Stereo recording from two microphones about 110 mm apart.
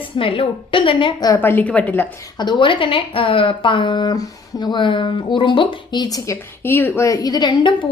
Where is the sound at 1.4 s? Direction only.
15° left (ahead or behind).